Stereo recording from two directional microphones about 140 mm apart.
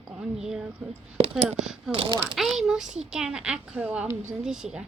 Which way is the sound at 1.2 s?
45° right (ahead or behind).